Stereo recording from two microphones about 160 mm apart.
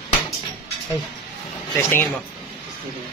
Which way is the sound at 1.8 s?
15° left (ahead or behind).